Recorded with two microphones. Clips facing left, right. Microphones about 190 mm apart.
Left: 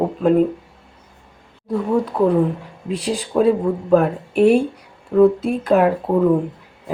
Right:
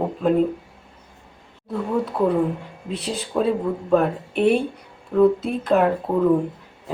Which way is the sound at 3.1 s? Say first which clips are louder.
Left 5 dB; centre (ahead or behind).